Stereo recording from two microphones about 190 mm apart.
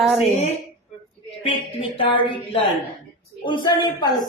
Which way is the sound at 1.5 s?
30° left (ahead or behind).